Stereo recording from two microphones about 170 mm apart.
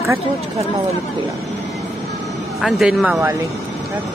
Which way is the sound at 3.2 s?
20° right (ahead or behind).